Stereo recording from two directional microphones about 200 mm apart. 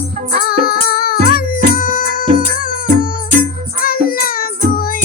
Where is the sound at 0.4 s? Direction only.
50° left (ahead or behind).